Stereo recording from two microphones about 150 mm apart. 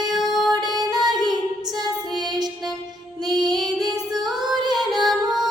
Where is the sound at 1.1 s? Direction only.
30° right (ahead or behind).